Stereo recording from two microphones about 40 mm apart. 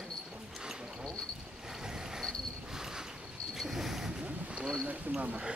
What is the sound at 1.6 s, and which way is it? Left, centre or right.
Vehicle, centre.